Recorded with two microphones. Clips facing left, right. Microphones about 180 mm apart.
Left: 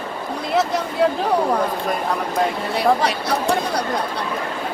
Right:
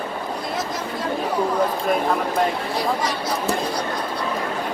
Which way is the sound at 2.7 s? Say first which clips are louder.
Left 5 dB; 65° left (ahead or behind).